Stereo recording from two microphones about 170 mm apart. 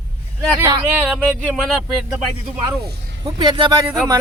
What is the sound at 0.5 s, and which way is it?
Speech, 15° right (ahead or behind).